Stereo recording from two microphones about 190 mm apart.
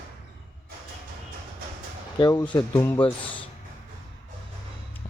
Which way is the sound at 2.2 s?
20° left (ahead or behind).